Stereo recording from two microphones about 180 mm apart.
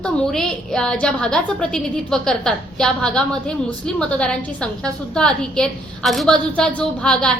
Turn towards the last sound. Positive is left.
turn(degrees=5)  # may be behind; listen again after turning